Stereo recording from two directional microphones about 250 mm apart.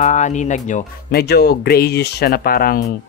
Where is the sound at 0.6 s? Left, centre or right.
Left.